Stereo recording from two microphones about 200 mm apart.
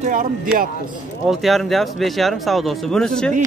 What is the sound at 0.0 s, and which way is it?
Speech, 40° right (ahead or behind).